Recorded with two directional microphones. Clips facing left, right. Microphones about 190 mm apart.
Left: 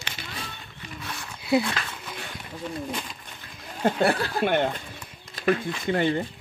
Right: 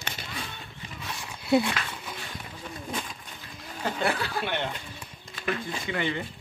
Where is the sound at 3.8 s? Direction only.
50° left (ahead or behind).